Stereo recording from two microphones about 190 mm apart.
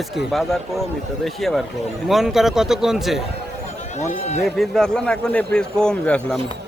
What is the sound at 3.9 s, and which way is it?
Speech, 35° left (ahead or behind).